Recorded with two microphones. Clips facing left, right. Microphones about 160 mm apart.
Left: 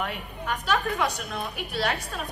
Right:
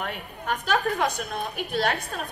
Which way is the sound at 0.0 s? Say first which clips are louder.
Left 1 dB; 50° right (ahead or behind).